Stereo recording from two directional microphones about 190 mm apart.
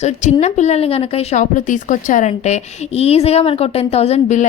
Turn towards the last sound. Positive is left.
turn(degrees=40)  # may be behind; listen again after turning